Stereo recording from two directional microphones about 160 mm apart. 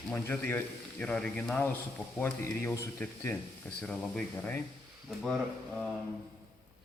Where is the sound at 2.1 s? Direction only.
15° left (ahead or behind).